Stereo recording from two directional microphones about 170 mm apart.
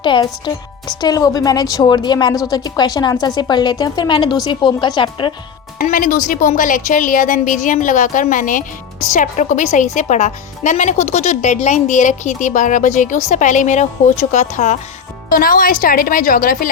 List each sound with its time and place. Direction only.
0.0 s speech: 25° left (ahead or behind)
5.8 s speech: 50° left (ahead or behind)